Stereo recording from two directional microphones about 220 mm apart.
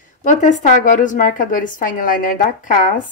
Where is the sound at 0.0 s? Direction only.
35° left (ahead or behind).